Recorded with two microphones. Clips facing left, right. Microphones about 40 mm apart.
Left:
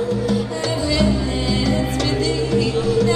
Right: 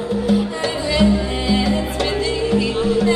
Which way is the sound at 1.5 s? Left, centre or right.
Right.